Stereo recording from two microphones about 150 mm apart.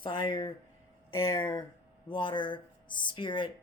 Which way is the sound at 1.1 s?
15° left (ahead or behind).